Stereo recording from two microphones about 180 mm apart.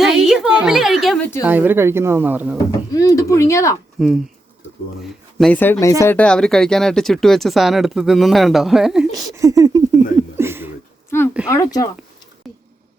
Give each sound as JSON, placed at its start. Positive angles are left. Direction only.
{"t": 0.0, "sound": "a sound", "side_deg": 0}
{"t": 1.5, "sound": "speech", "side_deg": -10}
{"t": 2.9, "sound": "speech", "side_deg": 20}
{"t": 4.0, "sound": "speech", "side_deg": -5}
{"t": 5.4, "sound": "speech", "side_deg": 10}
{"t": 9.3, "sound": "speech", "side_deg": -20}
{"t": 10.3, "sound": "a sound", "side_deg": -15}
{"t": 11.1, "sound": "speech", "side_deg": 15}
{"t": 12.4, "sound": "a sound", "side_deg": 0}